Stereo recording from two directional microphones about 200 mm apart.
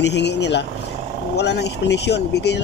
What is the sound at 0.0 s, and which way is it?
Speech, 60° left (ahead or behind).